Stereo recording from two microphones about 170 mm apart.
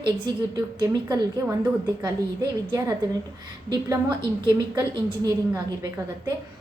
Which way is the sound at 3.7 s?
25° right (ahead or behind).